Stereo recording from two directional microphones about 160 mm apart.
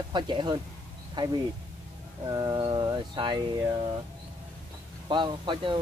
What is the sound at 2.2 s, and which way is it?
Speech, 25° right (ahead or behind).